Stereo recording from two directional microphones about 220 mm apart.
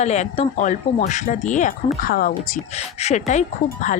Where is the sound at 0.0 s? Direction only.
30° left (ahead or behind).